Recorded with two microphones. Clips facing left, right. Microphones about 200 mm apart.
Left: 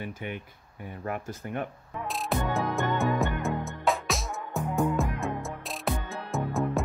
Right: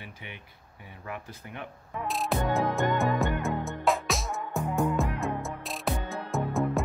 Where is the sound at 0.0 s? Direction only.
50° left (ahead or behind).